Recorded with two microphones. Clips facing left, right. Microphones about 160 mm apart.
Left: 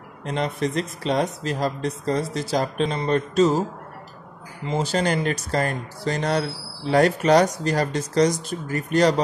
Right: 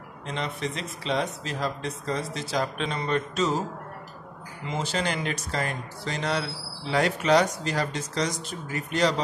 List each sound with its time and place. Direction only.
0.2 s speech: 45° left (ahead or behind)
4.6 s speech: 40° left (ahead or behind)